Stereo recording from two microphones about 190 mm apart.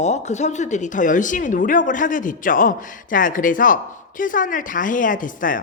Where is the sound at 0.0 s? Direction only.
35° left (ahead or behind).